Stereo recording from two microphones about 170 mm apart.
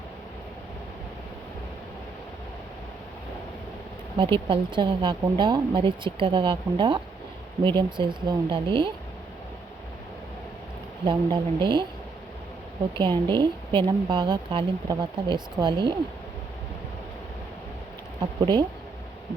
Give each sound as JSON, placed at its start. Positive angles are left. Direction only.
{"t": 4.2, "sound": "a woman's voice", "side_deg": -30}
{"t": 11.0, "sound": "a woman's voice", "side_deg": -30}
{"t": 13.0, "sound": "a woman's voice", "side_deg": -25}
{"t": 18.2, "sound": "speech", "side_deg": -25}